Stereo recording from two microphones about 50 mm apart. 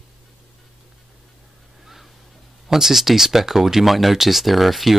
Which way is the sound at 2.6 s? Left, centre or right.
Centre.